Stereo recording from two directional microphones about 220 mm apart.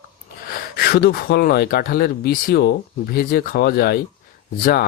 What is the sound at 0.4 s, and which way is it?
Speech, 45° left (ahead or behind).